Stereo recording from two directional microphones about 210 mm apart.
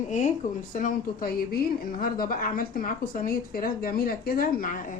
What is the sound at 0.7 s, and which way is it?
A woman's voice, 40° left (ahead or behind).